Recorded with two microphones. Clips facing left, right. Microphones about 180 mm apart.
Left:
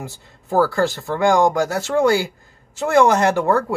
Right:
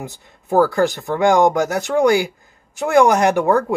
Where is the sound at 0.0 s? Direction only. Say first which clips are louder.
Right 2 dB; 20° right (ahead or behind).